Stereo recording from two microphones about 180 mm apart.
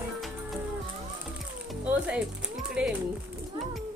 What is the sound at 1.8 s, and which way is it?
Music, 5° right (ahead or behind).